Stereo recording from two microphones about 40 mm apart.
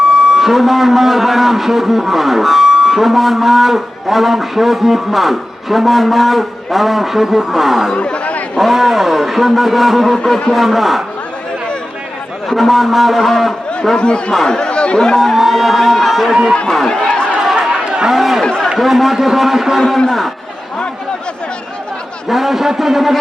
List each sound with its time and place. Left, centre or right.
0.0 s a man's voice: centre
7.9 s chatter: left
8.5 s a man's voice: centre
12.5 s a man's voice: centre
14.0 s speech: left
15.2 s speech: centre
16.8 s speech: centre
17.6 s chatter: right
18.1 s a man's voice: centre
22.3 s a man's voice: centre